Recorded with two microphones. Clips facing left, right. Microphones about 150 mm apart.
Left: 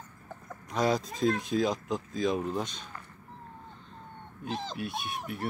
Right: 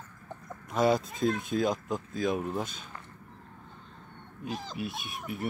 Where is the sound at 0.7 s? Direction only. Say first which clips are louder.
Right 2 dB; centre (ahead or behind).